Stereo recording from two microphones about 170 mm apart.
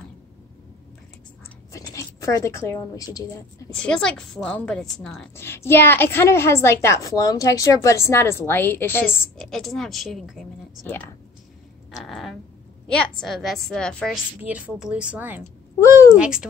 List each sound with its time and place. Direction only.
1.7 s speech: 20° left (ahead or behind)
3.7 s a woman's voice: 5° left (ahead or behind)
9.4 s a woman's voice: 5° left (ahead or behind)
12.0 s a sound: centre (ahead or behind)
12.8 s a woman's voice: 5° left (ahead or behind)
14.4 s speech: 5° right (ahead or behind)
15.8 s a woman's voice: 20° left (ahead or behind)
16.2 s a woman's voice: 5° right (ahead or behind)